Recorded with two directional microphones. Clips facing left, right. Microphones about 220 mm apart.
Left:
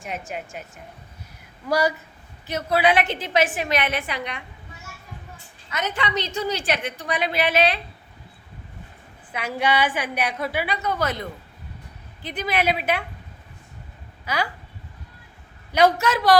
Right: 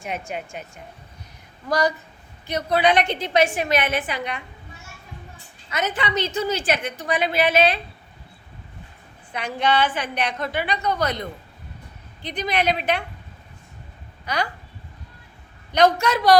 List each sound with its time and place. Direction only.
0.0 s a woman's voice: centre (ahead or behind)
2.5 s a woman's voice: 5° left (ahead or behind)
5.8 s a woman's voice: 5° right (ahead or behind)
9.3 s a woman's voice: 10° left (ahead or behind)
14.3 s a woman's voice: 5° left (ahead or behind)
15.7 s a woman's voice: 5° left (ahead or behind)